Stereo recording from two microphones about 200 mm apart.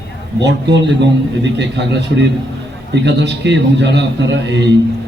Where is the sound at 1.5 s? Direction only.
60° right (ahead or behind).